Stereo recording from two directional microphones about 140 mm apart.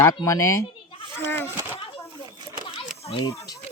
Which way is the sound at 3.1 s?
35° left (ahead or behind).